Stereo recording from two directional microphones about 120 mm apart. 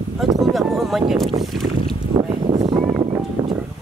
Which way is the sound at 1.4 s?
Centre (ahead or behind).